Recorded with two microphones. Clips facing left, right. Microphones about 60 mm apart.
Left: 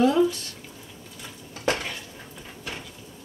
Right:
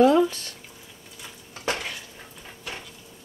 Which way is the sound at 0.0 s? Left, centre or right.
Right.